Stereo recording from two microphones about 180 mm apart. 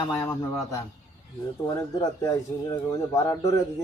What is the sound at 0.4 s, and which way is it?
A man's voice, 15° left (ahead or behind).